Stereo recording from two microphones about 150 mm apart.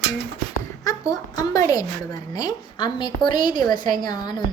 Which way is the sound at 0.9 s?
25° left (ahead or behind).